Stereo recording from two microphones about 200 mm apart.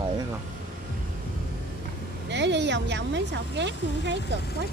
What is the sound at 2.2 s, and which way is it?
Speech, 60° right (ahead or behind).